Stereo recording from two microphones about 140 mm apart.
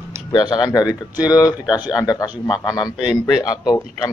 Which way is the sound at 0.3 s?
30° left (ahead or behind).